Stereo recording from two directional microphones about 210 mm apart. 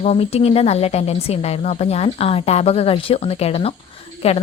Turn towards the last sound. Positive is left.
turn(degrees=30)  # may be behind; listen again after turning